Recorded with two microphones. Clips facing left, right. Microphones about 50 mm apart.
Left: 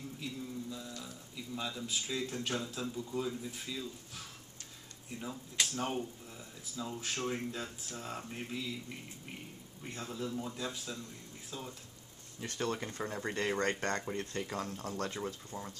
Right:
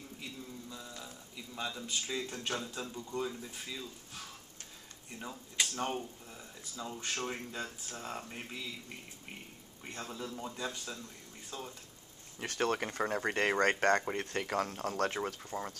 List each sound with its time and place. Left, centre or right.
0.2 s mantra: centre
1.3 s a sound: centre
1.9 s speech: centre
5.2 s speech: centre
9.9 s speech: centre
12.4 s speech: right
15.5 s speech: centre